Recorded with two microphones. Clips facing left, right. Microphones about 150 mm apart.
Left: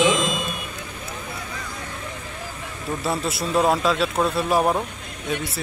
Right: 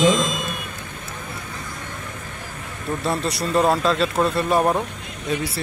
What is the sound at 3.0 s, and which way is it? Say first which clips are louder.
Speech: right 1 dB; centre (ahead or behind).